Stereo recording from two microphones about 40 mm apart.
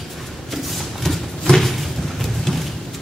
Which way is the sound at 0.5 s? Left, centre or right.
Centre.